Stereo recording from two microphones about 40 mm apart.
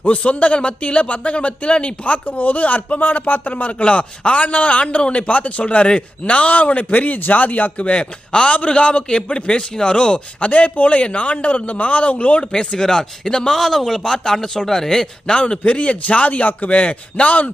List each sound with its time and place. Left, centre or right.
0.0 s speech: left
10.5 s speech: left
12.4 s speech: left
13.5 s speech: centre
15.3 s speech: left